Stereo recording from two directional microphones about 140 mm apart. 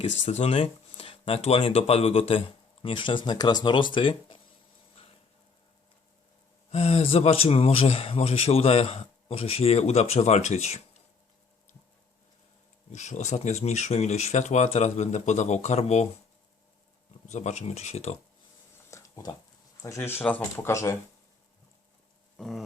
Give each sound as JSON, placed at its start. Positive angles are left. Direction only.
{"t": 0.0, "sound": "speech", "side_deg": 50}
{"t": 6.7, "sound": "speech", "side_deg": 45}
{"t": 12.9, "sound": "speech", "side_deg": 55}
{"t": 17.2, "sound": "speech", "side_deg": 55}
{"t": 18.9, "sound": "a sound", "side_deg": 20}
{"t": 19.8, "sound": "speech", "side_deg": 20}
{"t": 22.4, "sound": "a sound", "side_deg": 0}